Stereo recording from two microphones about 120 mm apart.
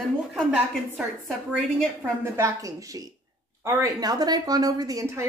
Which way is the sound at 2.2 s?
25° right (ahead or behind).